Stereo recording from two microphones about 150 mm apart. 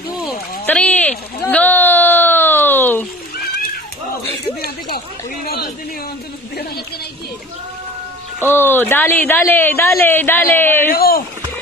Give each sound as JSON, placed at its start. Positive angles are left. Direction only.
{"t": 0.7, "sound": "a sound", "side_deg": 10}
{"t": 4.9, "sound": "speech", "side_deg": 85}
{"t": 8.5, "sound": "a woman's voice", "side_deg": 15}
{"t": 10.9, "sound": "speech", "side_deg": 80}